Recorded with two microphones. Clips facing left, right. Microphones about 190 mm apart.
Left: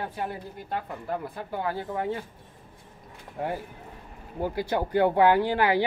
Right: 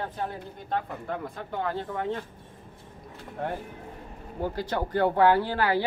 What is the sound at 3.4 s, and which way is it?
Speech, 10° left (ahead or behind).